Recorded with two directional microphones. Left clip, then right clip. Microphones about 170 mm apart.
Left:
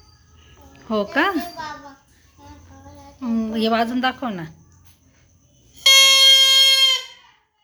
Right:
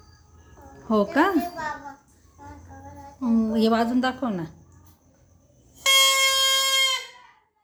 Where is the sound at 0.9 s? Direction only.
15° right (ahead or behind).